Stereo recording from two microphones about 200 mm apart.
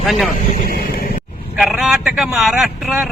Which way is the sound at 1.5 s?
Centre (ahead or behind).